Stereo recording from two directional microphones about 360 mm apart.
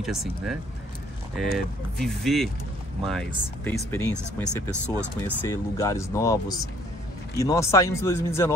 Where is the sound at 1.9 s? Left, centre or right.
Centre.